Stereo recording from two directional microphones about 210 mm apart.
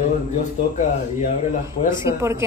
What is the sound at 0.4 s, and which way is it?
Speech, 35° left (ahead or behind).